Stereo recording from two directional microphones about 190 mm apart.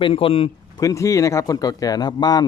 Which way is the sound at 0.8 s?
15° left (ahead or behind).